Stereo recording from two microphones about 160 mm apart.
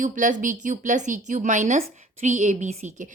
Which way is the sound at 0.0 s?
55° right (ahead or behind).